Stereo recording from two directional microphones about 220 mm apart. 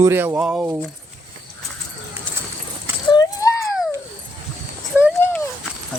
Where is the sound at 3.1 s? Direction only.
15° left (ahead or behind).